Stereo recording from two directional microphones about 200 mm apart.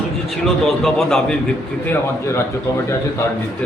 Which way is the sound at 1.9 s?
15° left (ahead or behind).